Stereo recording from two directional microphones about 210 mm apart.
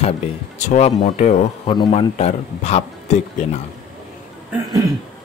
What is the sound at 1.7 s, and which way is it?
A man's voice, 25° left (ahead or behind).